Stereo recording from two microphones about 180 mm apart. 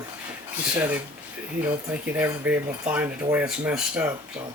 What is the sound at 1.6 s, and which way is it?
A man's voice, 10° right (ahead or behind).